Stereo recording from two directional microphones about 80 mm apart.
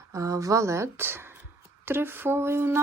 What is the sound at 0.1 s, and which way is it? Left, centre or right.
Speech, right.